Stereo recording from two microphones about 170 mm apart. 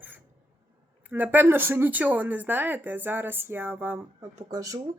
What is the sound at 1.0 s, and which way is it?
Speech, 10° right (ahead or behind).